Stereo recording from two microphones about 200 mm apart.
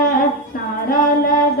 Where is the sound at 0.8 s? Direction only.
45° left (ahead or behind).